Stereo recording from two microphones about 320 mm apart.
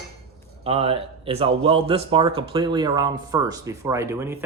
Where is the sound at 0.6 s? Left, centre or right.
Centre.